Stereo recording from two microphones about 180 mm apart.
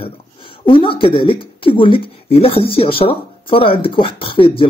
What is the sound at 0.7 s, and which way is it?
Speech, 30° left (ahead or behind).